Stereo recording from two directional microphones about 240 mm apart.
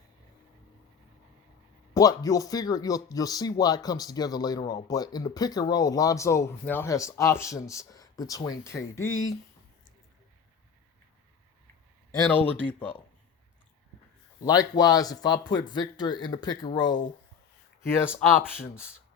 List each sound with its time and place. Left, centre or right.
1.9 s speech: centre
9.0 s speech: left
12.3 s speech: centre
14.4 s speech: centre